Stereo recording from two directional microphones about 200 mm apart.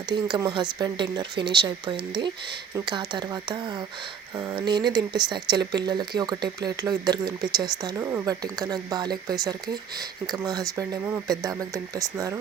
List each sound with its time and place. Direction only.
0.1 s speech: 20° right (ahead or behind)